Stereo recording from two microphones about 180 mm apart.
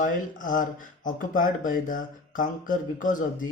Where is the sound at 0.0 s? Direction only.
45° left (ahead or behind).